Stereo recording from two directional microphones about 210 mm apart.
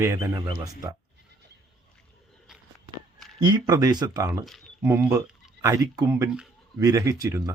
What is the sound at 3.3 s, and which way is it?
Speech, 20° right (ahead or behind).